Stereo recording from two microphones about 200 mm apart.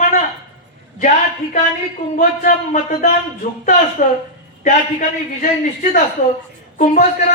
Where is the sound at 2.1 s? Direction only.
40° left (ahead or behind).